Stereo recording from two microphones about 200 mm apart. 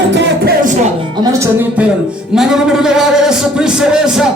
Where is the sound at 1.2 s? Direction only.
15° right (ahead or behind).